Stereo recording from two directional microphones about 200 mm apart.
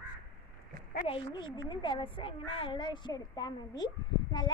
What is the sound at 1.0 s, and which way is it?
A child's voice, 25° left (ahead or behind).